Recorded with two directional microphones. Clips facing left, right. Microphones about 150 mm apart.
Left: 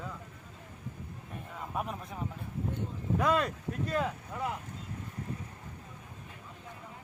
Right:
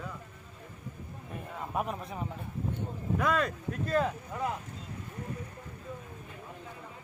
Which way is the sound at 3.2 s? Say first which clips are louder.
Left 1 dB; 35° left (ahead or behind).